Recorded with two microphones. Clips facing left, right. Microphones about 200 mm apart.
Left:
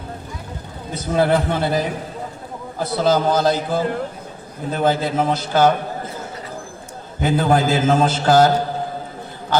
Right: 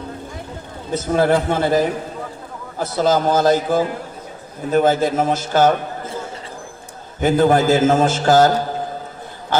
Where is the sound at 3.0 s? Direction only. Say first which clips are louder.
Right 1 dB; 45° right (ahead or behind).